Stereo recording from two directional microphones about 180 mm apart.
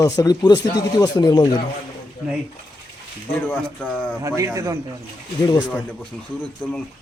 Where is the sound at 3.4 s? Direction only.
10° left (ahead or behind).